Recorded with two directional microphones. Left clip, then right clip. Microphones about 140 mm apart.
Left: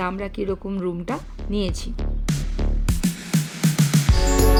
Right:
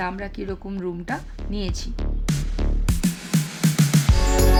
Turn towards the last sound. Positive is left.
turn(degrees=0)  # may be behind; listen again after turning